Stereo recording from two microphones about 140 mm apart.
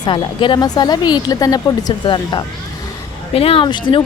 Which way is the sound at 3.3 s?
40° left (ahead or behind).